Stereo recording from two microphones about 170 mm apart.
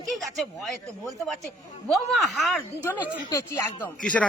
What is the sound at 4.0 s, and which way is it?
Speech, 5° left (ahead or behind).